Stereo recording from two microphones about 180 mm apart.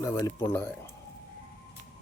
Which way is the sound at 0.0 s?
15° left (ahead or behind).